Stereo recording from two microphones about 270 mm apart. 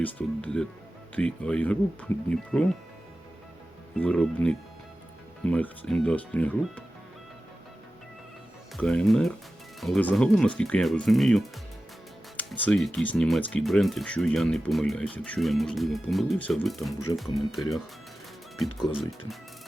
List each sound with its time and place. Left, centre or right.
0.0 s speech: centre
3.9 s speech: centre
8.7 s speech: centre